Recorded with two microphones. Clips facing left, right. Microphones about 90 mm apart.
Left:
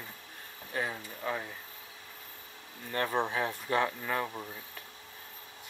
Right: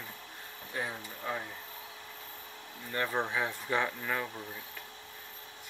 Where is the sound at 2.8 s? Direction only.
55° left (ahead or behind).